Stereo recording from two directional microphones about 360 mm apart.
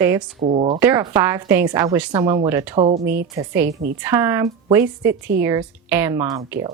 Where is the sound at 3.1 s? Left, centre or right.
Centre.